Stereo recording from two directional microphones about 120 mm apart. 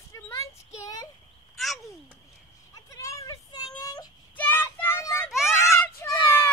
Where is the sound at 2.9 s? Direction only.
25° left (ahead or behind).